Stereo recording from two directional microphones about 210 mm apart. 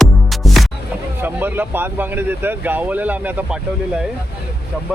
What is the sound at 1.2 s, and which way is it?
Speech, 10° right (ahead or behind).